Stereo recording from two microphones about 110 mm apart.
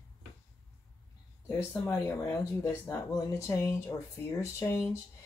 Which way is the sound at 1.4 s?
20° left (ahead or behind).